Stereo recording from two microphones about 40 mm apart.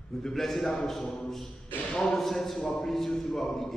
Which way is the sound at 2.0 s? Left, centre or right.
Centre.